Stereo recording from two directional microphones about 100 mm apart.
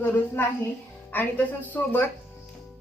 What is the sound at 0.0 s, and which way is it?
A woman's voice, 20° left (ahead or behind).